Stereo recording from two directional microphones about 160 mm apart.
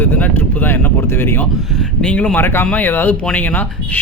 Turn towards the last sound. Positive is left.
turn(degrees=10)  # may be behind; listen again after turning